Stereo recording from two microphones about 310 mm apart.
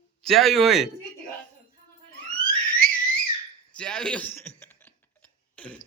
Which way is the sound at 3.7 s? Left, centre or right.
Centre.